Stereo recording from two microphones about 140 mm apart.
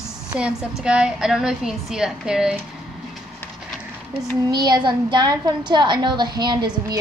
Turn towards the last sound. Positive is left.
turn(degrees=-30)  # may be behind; listen again after turning